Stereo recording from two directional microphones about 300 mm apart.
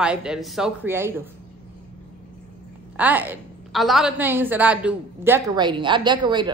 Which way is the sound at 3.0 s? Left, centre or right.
Centre.